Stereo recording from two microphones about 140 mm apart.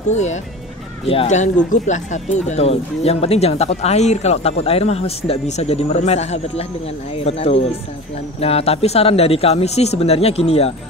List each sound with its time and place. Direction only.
0.1 s speech: 55° left (ahead or behind)